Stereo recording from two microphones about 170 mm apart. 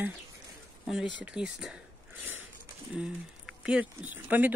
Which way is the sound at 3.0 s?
5° right (ahead or behind).